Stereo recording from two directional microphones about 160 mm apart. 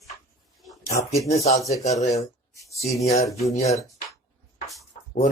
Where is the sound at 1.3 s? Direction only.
40° left (ahead or behind).